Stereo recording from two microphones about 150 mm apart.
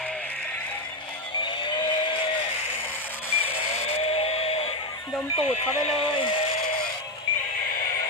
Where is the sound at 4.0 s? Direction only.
40° left (ahead or behind).